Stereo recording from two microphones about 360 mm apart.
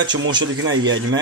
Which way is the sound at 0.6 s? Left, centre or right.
Right.